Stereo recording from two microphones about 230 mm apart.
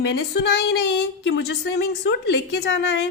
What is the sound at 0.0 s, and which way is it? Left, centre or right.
Speech, left.